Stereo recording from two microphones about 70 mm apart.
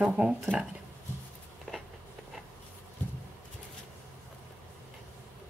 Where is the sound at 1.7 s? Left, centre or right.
Centre.